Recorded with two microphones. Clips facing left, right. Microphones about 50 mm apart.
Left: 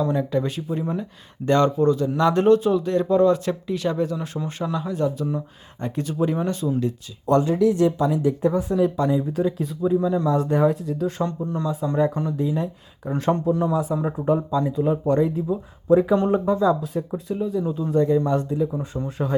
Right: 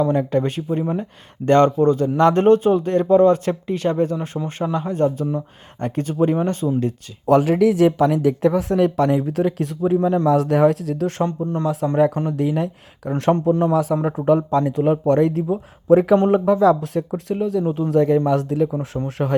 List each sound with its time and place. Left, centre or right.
0.0 s speech: right
7.3 s speech: right
9.9 s a man's voice: right
10.2 s speech: right
11.2 s speech: right
11.6 s speech: right
13.1 s speech: right
13.3 s a man's voice: right
13.7 s speech: right
14.6 s speech: right
16.3 s speech: right
17.9 s speech: right
19.2 s speech: right